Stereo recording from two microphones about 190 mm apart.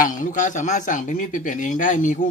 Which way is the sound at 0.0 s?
45° left (ahead or behind).